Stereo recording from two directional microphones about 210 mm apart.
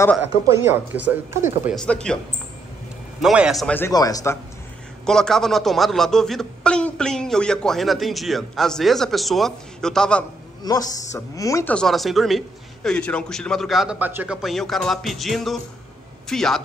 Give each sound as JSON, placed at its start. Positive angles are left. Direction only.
{"t": 0.5, "sound": "a man's voice", "side_deg": -10}
{"t": 3.2, "sound": "speech", "side_deg": -5}
{"t": 5.0, "sound": "a man's voice", "side_deg": 0}
{"t": 10.6, "sound": "a man's voice", "side_deg": 15}